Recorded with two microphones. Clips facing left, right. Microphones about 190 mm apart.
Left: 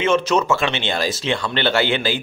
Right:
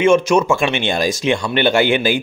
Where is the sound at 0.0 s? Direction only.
10° right (ahead or behind).